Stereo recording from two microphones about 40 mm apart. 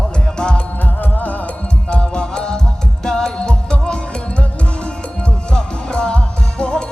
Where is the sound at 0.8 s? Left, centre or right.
Left.